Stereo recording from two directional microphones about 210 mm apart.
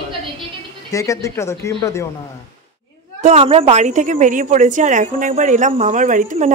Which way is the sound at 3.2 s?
30° right (ahead or behind).